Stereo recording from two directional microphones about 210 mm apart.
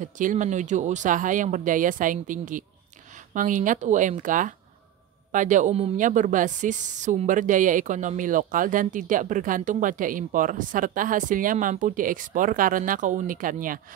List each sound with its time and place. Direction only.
0.0 s a woman's voice: 40° right (ahead or behind)